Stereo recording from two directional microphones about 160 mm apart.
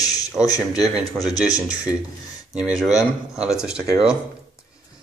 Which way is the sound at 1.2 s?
5° right (ahead or behind).